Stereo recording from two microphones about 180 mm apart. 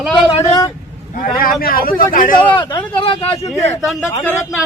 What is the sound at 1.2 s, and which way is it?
Speech, 55° left (ahead or behind).